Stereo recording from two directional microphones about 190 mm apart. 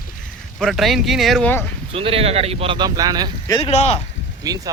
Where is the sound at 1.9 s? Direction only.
30° right (ahead or behind).